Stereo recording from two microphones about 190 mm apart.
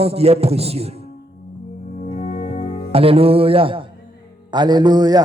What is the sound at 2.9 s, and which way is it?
A man's voice, 30° right (ahead or behind).